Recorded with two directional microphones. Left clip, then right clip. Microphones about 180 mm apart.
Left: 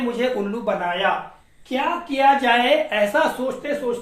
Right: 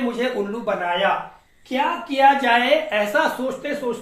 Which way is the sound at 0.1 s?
25° left (ahead or behind).